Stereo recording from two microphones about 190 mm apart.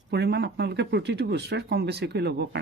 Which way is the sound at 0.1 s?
60° right (ahead or behind).